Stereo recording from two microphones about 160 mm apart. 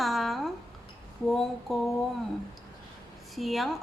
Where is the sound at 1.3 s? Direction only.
Centre (ahead or behind).